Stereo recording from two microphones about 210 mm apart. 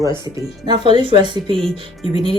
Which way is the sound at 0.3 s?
20° right (ahead or behind).